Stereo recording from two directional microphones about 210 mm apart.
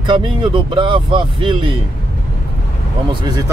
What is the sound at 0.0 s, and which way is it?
Speech, 20° right (ahead or behind).